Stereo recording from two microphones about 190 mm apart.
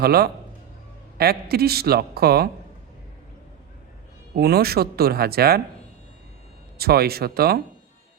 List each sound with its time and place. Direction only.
0.0 s a man's voice: 55° right (ahead or behind)
4.4 s a man's voice: 55° right (ahead or behind)
6.7 s a man's voice: 55° right (ahead or behind)